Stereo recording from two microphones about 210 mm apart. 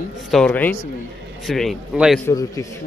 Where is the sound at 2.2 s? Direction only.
15° left (ahead or behind).